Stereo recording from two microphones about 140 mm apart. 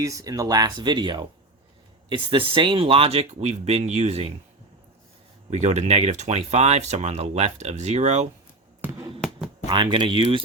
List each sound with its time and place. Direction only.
0.0 s speech: 25° right (ahead or behind); by 4.4 s 45° right (ahead or behind)
5.5 s speech: 50° right (ahead or behind)
8.8 s a sound: 15° right (ahead or behind)
9.6 s speech: 35° right (ahead or behind)